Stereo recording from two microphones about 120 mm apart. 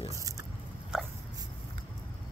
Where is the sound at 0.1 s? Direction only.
30° right (ahead or behind).